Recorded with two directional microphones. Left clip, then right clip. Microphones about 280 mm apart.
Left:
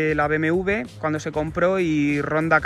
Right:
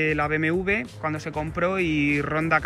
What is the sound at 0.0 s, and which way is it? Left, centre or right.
Speech, centre.